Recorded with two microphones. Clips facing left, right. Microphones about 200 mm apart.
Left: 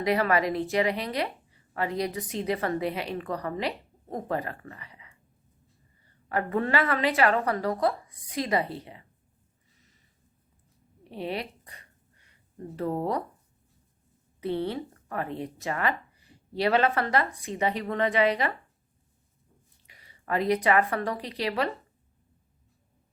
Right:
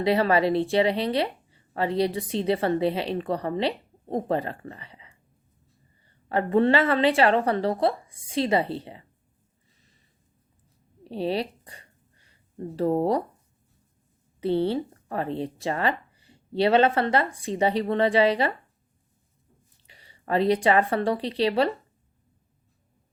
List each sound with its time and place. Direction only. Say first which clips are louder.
0.0 s speech: right 3 dB; 30° right (ahead or behind)
11.1 s a sound: right 6 dB; 30° right (ahead or behind)
14.4 s speech: right 6 dB; 30° right (ahead or behind)
19.9 s speech: right 4 dB; 30° right (ahead or behind)